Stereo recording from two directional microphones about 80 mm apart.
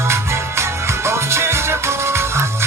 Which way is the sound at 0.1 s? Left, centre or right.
Right.